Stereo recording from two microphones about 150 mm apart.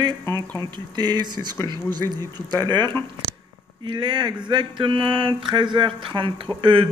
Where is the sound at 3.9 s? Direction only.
30° right (ahead or behind).